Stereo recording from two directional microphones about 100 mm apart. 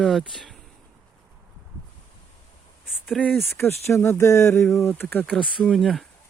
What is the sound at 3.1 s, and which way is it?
Speech, 5° left (ahead or behind).